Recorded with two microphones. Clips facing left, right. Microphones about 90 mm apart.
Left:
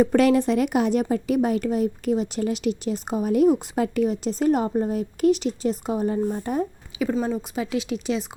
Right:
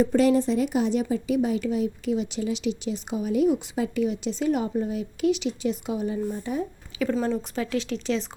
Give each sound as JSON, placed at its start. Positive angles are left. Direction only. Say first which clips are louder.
{"t": 0.0, "sound": "speech", "louder": "left 2 dB", "side_deg": 65}
{"t": 7.0, "sound": "speech", "louder": "left 1 dB", "side_deg": 10}